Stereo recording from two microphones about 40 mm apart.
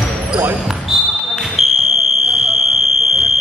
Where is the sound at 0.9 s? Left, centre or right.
Centre.